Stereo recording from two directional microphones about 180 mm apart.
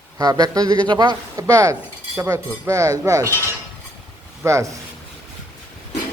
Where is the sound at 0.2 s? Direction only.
20° right (ahead or behind).